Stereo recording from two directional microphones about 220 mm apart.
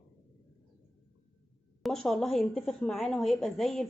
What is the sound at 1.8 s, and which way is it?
Speech, centre (ahead or behind).